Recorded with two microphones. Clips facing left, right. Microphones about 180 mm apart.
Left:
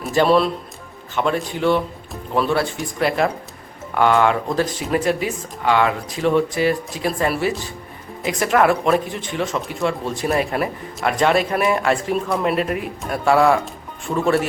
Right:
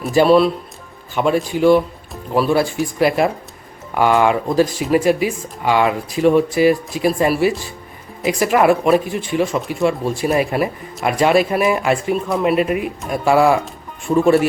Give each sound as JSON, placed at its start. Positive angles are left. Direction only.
{"t": 0.1, "sound": "speech", "side_deg": -5}